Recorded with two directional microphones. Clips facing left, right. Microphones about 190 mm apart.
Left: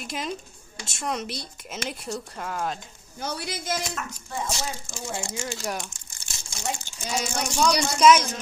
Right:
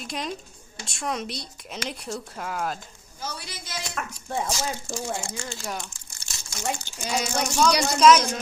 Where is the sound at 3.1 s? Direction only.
60° left (ahead or behind).